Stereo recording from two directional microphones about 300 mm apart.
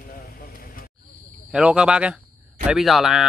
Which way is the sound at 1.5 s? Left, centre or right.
Centre.